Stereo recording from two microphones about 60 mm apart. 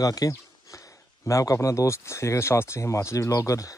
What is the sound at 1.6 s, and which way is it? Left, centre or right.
Speech, left.